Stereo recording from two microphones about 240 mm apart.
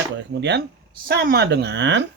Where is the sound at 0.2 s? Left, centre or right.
Right.